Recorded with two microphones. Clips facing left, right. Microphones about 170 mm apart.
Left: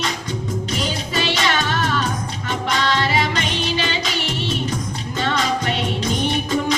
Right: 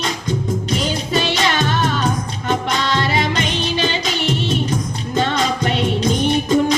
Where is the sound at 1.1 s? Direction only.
50° right (ahead or behind).